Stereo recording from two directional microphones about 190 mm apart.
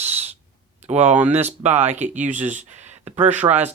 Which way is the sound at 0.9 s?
35° right (ahead or behind).